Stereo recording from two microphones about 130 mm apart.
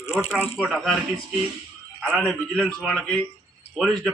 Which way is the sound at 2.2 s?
5° left (ahead or behind).